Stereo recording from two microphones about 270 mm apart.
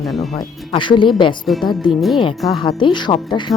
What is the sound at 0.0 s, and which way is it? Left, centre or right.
Speech, centre.